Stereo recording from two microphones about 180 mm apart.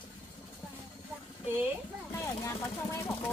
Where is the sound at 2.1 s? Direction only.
15° left (ahead or behind).